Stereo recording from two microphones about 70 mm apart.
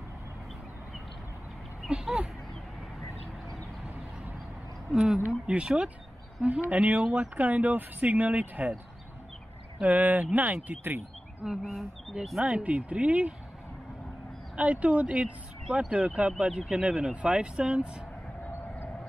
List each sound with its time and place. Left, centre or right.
1.9 s speech: centre
4.9 s speech: centre
9.8 s speech: right
11.6 s speech: centre
12.4 s speech: centre
14.6 s speech: centre